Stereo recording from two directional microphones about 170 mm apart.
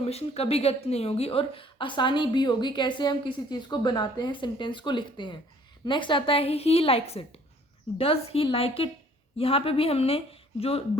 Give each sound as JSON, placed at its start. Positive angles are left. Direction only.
{"t": 0.0, "sound": "a woman's voice", "side_deg": 35}